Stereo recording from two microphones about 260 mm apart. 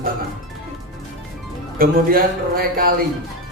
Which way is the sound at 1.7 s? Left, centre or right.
Right.